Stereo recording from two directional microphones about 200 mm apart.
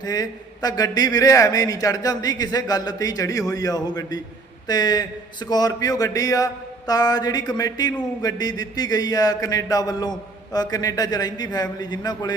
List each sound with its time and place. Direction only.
0.0 s a man's voice: 20° left (ahead or behind)